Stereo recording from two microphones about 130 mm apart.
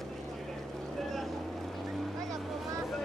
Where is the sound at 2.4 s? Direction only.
Centre (ahead or behind).